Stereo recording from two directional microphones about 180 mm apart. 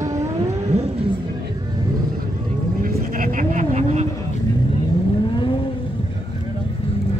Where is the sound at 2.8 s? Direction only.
50° right (ahead or behind).